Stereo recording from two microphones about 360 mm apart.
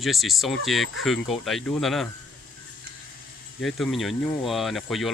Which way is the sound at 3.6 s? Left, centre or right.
Centre.